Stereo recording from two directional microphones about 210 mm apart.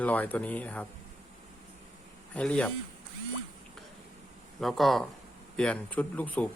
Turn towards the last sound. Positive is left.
turn(degrees=5)  # may be behind; listen again after turning